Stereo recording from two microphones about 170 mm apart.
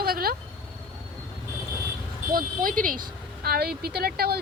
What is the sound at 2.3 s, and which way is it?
Speech, 55° right (ahead or behind).